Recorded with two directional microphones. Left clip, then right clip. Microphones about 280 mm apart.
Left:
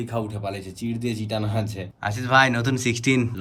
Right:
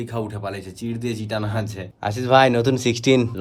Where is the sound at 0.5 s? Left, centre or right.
Centre.